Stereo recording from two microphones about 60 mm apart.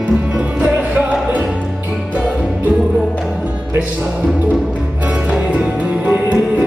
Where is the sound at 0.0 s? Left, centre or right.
Right.